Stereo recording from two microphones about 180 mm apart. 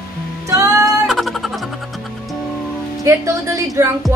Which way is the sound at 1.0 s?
Centre (ahead or behind).